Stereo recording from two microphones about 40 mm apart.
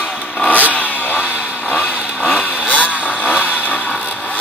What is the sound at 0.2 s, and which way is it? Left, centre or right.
Vehicle, left.